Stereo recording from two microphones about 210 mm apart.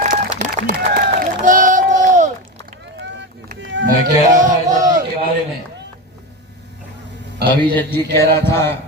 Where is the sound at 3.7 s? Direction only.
60° right (ahead or behind).